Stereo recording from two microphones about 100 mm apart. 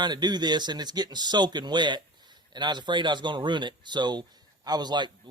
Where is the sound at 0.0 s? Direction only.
45° right (ahead or behind).